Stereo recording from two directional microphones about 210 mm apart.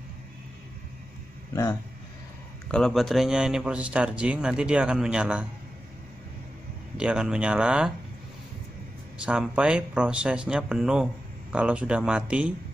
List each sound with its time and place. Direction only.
1.5 s speech: 15° left (ahead or behind)
2.7 s speech: centre (ahead or behind)
7.0 s speech: 5° right (ahead or behind)
9.2 s speech: 5° right (ahead or behind)